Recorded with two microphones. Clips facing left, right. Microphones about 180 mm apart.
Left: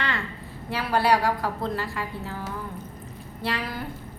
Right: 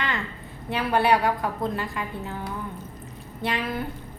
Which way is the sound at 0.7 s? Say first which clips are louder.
Right 1 dB; 20° right (ahead or behind).